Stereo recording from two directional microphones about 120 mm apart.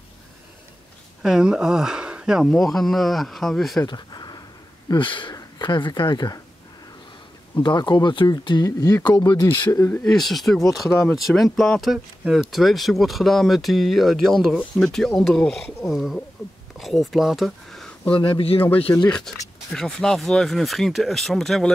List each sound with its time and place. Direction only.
1.2 s speech: 5° right (ahead or behind)
3.8 s a sound: 35° left (ahead or behind)
4.8 s a man's voice: 45° left (ahead or behind)
7.6 s speech: 40° left (ahead or behind)
10.0 s speech: centre (ahead or behind)
18.1 s a man's voice: 45° left (ahead or behind)
19.0 s speech: 5° left (ahead or behind)